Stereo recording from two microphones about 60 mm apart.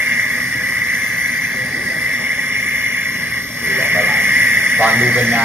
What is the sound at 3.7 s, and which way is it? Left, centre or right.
Radio, right.